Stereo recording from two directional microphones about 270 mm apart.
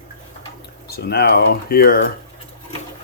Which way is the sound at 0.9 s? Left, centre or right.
Left.